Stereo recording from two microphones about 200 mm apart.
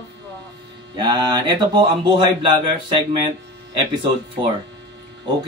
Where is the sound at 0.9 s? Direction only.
25° right (ahead or behind).